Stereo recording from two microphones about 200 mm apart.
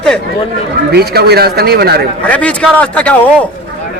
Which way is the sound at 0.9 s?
55° right (ahead or behind).